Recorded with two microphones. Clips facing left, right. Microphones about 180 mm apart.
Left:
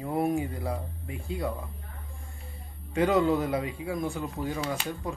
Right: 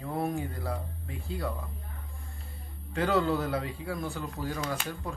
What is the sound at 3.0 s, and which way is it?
Speech, 5° left (ahead or behind).